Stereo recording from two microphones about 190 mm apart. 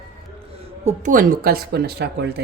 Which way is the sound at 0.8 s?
45° right (ahead or behind).